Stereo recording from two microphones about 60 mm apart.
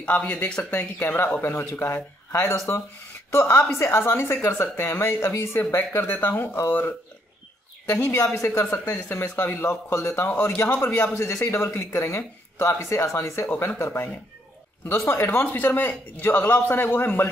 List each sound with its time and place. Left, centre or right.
0.0 s a man's voice: left
7.9 s a woman's voice: left
9.4 s a man's voice: left
13.5 s a man's voice: left
15.4 s a man's voice: left